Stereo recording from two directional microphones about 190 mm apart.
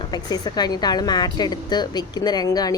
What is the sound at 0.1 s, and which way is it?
A woman's voice, 20° left (ahead or behind).